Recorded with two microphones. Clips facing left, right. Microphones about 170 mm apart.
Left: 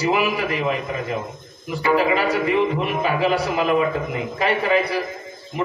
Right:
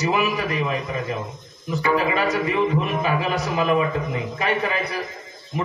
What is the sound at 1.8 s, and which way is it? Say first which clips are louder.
Speech: left 3 dB; 30° left (ahead or behind).